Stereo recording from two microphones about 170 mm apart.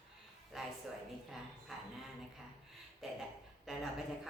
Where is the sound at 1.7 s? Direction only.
Centre (ahead or behind).